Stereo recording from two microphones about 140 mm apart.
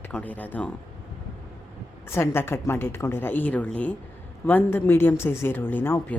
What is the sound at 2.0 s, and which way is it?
Speech, 20° left (ahead or behind).